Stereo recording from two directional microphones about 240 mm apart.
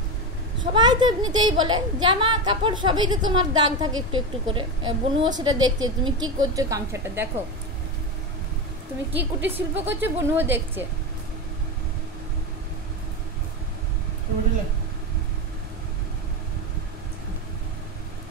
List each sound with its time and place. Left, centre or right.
0.7 s a woman's voice: centre
9.1 s a woman's voice: centre